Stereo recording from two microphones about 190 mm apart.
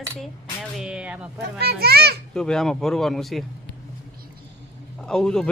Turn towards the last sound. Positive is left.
turn(degrees=5)  # may be behind; listen again after turning